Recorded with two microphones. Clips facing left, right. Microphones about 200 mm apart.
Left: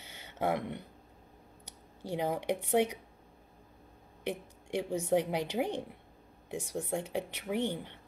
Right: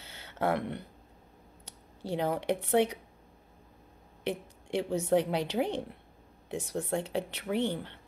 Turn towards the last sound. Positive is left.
turn(degrees=15)  # may be behind; listen again after turning